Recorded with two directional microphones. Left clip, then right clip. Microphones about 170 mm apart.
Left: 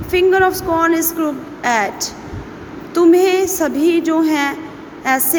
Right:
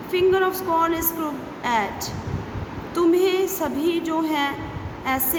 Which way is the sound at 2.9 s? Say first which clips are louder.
Left 8 dB; 35° left (ahead or behind).